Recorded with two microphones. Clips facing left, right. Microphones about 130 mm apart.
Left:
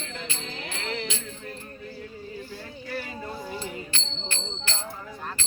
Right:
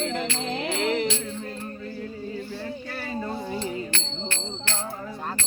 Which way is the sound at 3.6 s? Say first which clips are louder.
Right 5 dB; 70° right (ahead or behind).